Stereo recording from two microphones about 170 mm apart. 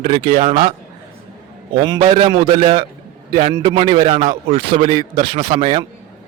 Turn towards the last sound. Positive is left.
turn(degrees=-40)  # may be behind; listen again after turning